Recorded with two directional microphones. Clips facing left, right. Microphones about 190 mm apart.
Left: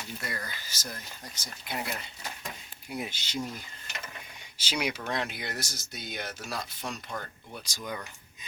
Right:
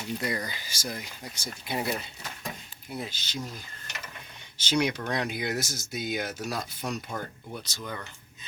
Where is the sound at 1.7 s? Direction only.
25° right (ahead or behind).